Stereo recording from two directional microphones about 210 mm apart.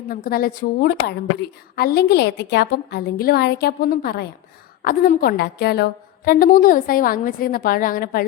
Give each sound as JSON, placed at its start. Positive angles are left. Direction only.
{"t": 0.1, "sound": "a woman's voice", "side_deg": 45}